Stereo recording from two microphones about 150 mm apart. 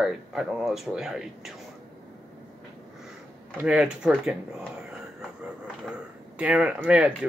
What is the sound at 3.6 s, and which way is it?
Speech, 5° right (ahead or behind).